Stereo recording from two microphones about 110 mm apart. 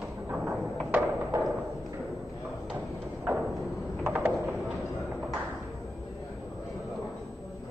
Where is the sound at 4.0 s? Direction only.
25° right (ahead or behind).